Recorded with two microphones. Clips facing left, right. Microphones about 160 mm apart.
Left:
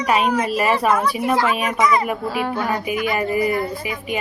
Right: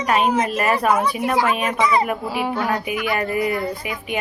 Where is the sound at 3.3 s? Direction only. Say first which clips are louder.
Left 2 dB; 55° right (ahead or behind).